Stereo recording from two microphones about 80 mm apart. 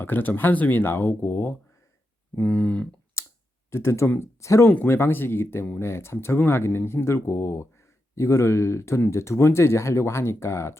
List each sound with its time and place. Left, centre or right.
0.0 s speech: left
3.2 s clicking: left
3.7 s speech: left